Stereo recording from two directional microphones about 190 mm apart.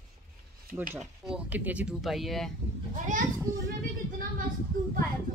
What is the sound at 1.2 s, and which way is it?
Speech, 5° right (ahead or behind).